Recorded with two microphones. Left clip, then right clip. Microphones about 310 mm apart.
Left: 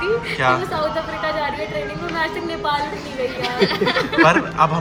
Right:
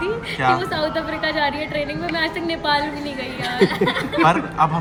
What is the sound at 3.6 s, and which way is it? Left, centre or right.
Speech, left.